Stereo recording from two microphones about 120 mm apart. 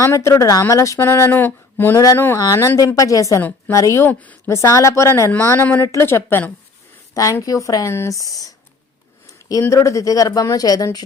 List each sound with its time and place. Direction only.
0.0 s speech: 25° left (ahead or behind)
4.4 s speech: 25° left (ahead or behind)